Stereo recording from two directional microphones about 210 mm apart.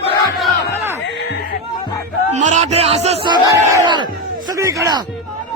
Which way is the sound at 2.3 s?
35° right (ahead or behind).